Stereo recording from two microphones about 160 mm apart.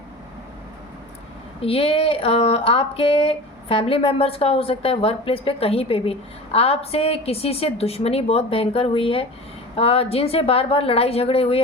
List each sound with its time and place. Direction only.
1.6 s speech: 35° left (ahead or behind)